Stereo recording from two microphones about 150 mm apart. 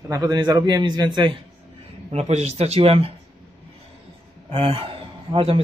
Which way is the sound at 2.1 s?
45° right (ahead or behind).